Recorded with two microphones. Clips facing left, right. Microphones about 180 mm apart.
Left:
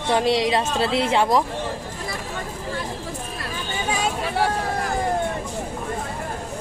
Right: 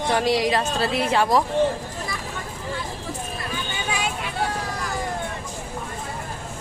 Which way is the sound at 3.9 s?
40° left (ahead or behind).